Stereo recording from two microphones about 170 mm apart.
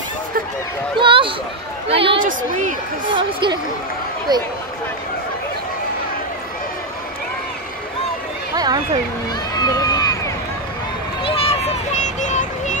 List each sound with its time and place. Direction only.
0.9 s a woman's voice: 30° right (ahead or behind)
2.2 s speech: 50° right (ahead or behind)
3.1 s a woman's voice: 30° right (ahead or behind)
8.5 s speech: 25° right (ahead or behind)
9.6 s run: 20° left (ahead or behind)
11.2 s a sound: 35° left (ahead or behind)